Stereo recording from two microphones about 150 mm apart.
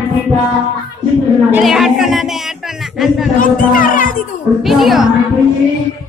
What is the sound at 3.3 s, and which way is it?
Speech, 65° left (ahead or behind).